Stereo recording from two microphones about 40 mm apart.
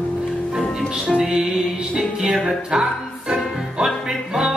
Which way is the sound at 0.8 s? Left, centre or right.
Centre.